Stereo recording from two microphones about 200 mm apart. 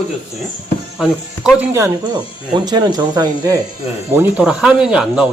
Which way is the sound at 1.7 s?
15° right (ahead or behind).